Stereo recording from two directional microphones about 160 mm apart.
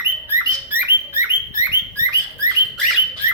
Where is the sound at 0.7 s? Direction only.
15° right (ahead or behind).